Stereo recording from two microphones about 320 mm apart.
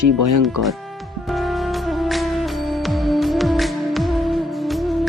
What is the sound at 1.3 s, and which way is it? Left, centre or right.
Music, centre.